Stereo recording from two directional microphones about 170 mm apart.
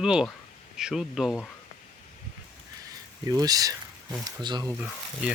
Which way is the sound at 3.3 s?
20° right (ahead or behind).